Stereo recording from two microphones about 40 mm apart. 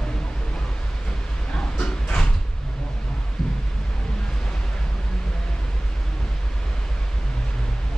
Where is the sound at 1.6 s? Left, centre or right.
Left.